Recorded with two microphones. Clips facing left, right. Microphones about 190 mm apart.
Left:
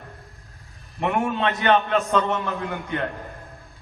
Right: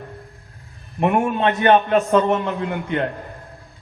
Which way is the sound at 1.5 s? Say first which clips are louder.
Right 5 dB; 40° right (ahead or behind).